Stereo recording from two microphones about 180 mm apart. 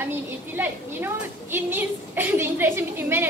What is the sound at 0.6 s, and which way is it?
A woman's voice, 10° right (ahead or behind).